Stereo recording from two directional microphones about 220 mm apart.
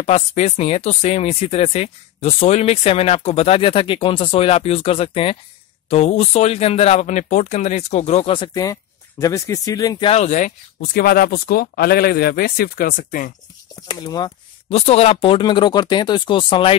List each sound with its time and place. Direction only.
0.0 s speech: 30° left (ahead or behind)
13.7 s speech: 20° left (ahead or behind)